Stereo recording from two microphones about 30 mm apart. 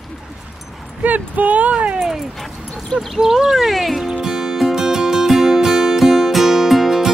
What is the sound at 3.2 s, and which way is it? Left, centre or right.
Speech, centre.